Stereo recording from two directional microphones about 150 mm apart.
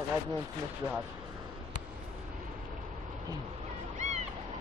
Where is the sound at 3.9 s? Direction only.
50° right (ahead or behind).